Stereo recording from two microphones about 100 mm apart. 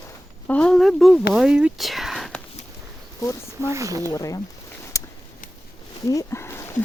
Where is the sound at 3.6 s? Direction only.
30° right (ahead or behind).